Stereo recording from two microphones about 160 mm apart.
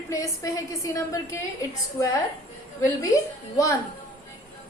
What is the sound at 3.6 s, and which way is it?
Speech, 20° left (ahead or behind).